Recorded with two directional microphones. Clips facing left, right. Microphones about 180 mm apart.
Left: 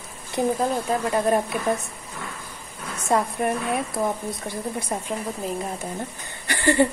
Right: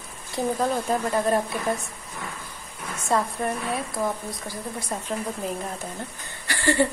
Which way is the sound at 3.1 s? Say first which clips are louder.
Left 2 dB; 15° left (ahead or behind).